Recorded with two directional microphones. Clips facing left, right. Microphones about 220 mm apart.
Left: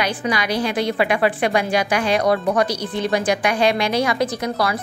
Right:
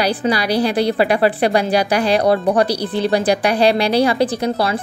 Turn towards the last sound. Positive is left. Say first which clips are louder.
# right 4 dB
turn(degrees=-30)  # may be behind; listen again after turning